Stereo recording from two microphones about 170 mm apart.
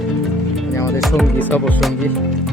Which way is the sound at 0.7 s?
15° left (ahead or behind).